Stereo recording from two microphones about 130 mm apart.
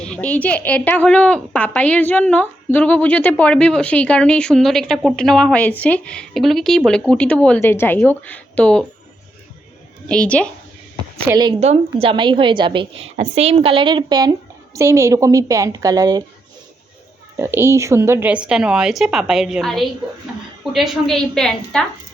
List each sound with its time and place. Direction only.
0.0 s a woman's voice: 10° left (ahead or behind)
10.1 s a woman's voice: 10° left (ahead or behind)
11.6 s a woman's voice: 50° right (ahead or behind); by 16.2 s 30° right (ahead or behind)
17.3 s a woman's voice: 20° right (ahead or behind); by 21.8 s 5° left (ahead or behind)